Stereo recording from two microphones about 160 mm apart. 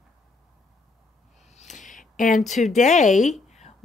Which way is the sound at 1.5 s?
45° left (ahead or behind).